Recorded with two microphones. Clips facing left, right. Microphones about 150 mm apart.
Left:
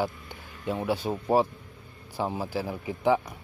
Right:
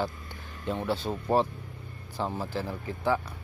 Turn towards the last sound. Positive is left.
turn(degrees=15)  # may be behind; listen again after turning